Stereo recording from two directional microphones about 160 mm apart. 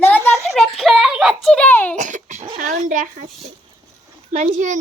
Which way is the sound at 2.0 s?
50° right (ahead or behind).